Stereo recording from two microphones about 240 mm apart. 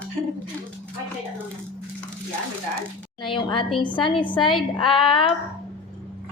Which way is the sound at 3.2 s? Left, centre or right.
Centre.